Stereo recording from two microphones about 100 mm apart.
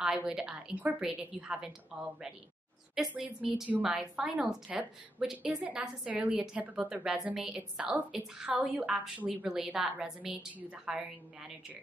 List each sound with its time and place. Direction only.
0.0 s a woman's voice: 5° right (ahead or behind)